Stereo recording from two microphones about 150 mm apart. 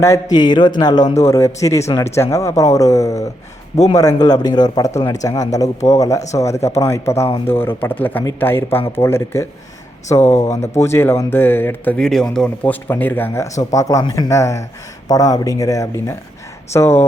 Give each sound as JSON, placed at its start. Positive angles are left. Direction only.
{"t": 0.0, "sound": "a man's voice", "side_deg": 25}
{"t": 10.6, "sound": "a man's voice", "side_deg": 15}